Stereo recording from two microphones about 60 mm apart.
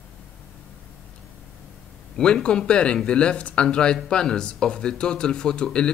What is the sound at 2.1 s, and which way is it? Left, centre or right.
Speech, centre.